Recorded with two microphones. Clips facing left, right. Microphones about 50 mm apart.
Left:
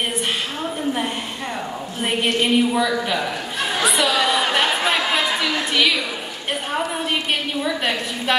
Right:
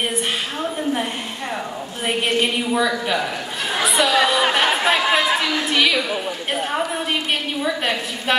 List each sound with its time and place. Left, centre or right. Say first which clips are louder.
2.0 s a woman's voice: even; centre
4.4 s a sound: right 1 dB; centre
7.6 s a woman's voice: even; centre